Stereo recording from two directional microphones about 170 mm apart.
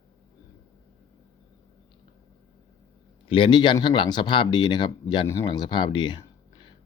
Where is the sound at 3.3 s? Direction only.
30° left (ahead or behind).